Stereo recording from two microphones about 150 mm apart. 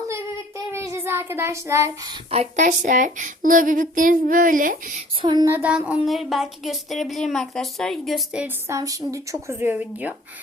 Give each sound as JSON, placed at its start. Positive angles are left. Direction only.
{"t": 0.7, "sound": "child singing", "side_deg": -20}
{"t": 2.3, "sound": "speech", "side_deg": -50}
{"t": 5.2, "sound": "a woman's voice", "side_deg": -30}
{"t": 5.5, "sound": "a sound", "side_deg": -10}
{"t": 6.1, "sound": "a woman's voice", "side_deg": 0}
{"t": 8.7, "sound": "a woman's voice", "side_deg": -25}